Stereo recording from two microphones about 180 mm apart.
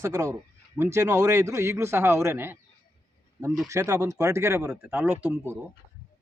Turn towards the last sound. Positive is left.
turn(degrees=-15)  # may be behind; listen again after turning